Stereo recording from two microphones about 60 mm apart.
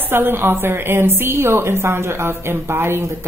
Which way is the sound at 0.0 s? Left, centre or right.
Right.